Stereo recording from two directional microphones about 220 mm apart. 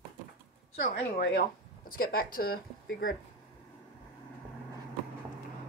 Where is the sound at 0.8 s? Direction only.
45° left (ahead or behind).